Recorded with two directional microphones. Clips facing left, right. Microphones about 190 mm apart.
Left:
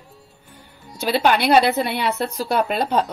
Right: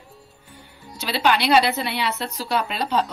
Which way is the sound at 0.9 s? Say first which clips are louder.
Left 3 dB; 50° left (ahead or behind).